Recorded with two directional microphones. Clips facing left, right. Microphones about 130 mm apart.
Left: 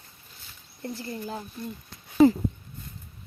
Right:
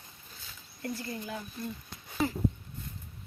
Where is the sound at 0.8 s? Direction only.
30° left (ahead or behind).